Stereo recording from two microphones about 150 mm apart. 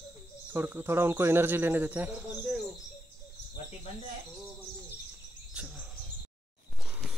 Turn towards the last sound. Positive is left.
turn(degrees=-5)  # may be behind; listen again after turning